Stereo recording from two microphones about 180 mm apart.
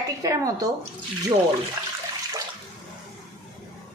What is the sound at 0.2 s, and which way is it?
Speech, 20° right (ahead or behind).